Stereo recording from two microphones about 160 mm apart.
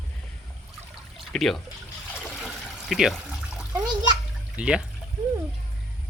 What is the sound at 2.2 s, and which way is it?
Water, centre (ahead or behind).